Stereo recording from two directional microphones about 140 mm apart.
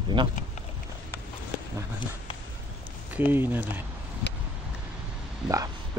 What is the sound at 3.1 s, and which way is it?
Speech, 15° right (ahead or behind).